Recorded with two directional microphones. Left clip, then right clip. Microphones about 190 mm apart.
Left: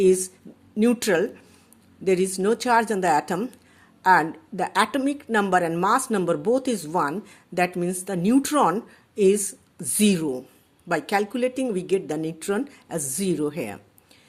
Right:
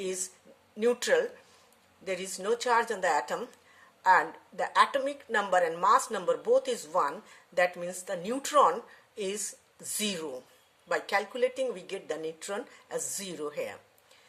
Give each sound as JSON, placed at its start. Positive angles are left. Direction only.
{"t": 0.0, "sound": "speech", "side_deg": 35}